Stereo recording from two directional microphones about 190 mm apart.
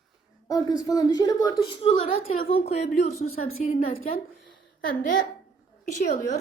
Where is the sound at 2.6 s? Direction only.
35° left (ahead or behind).